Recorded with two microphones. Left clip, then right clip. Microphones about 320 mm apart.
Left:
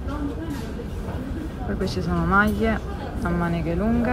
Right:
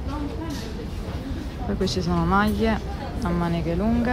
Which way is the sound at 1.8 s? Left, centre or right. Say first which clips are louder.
Right 2 dB; centre.